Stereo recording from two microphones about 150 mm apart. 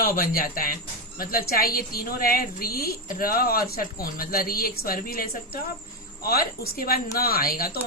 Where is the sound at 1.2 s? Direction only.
80° left.